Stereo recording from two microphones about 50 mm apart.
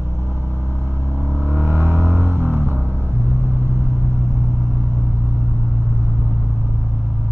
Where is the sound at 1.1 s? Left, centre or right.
Right.